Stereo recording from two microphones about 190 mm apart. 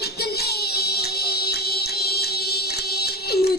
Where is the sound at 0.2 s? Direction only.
55° left (ahead or behind).